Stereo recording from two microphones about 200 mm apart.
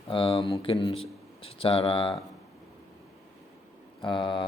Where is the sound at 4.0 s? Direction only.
25° left (ahead or behind).